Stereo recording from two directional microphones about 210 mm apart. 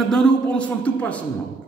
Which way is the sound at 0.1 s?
5° left (ahead or behind).